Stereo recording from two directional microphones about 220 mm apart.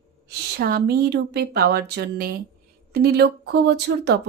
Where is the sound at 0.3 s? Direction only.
45° right (ahead or behind).